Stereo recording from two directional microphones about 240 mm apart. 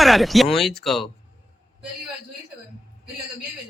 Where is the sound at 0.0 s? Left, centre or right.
Centre.